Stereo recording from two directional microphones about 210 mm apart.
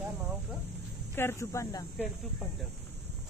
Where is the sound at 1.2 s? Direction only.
10° left (ahead or behind).